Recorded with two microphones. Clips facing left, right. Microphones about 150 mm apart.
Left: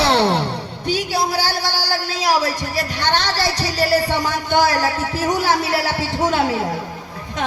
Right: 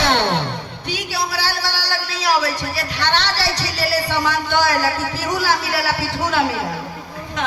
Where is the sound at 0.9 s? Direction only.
45° left (ahead or behind).